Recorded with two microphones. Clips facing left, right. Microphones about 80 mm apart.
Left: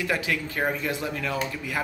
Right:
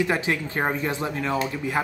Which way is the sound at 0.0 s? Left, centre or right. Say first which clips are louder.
Right 3 dB; right.